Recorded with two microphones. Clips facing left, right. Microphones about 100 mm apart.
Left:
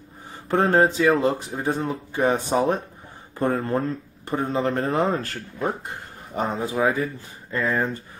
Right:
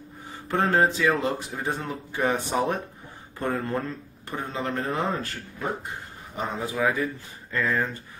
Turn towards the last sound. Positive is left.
turn(degrees=25)  # may be behind; listen again after turning